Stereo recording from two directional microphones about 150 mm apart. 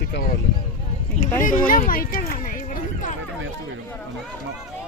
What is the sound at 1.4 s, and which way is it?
Speech, 60° left (ahead or behind).